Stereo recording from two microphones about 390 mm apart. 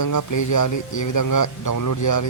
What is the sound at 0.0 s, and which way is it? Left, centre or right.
A man's voice, left.